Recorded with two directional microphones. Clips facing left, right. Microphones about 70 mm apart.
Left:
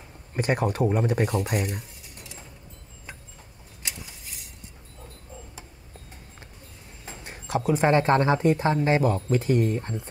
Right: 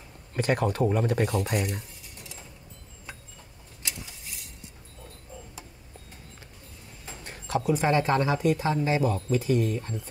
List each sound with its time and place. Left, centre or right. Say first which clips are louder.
0.3 s speech: left 1 dB; left
7.1 s a sound: left 1 dB; left
7.6 s speech: left 4 dB; left